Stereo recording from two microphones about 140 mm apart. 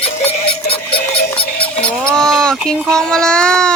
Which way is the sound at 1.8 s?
5° left (ahead or behind).